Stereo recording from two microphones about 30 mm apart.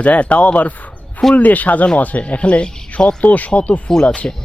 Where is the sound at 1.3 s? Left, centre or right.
Left.